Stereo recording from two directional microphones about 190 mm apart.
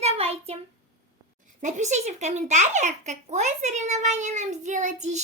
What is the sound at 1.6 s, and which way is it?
A child's voice, 35° right (ahead or behind).